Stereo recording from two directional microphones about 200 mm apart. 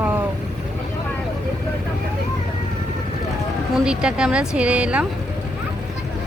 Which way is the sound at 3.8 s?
5° right (ahead or behind).